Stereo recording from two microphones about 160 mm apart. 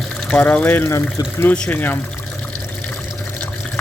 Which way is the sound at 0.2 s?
5° left (ahead or behind).